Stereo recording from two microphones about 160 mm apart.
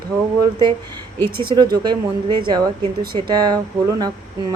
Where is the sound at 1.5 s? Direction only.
25° right (ahead or behind).